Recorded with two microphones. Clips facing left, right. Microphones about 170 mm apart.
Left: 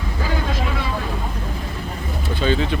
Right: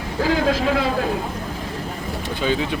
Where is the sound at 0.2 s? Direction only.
90° right.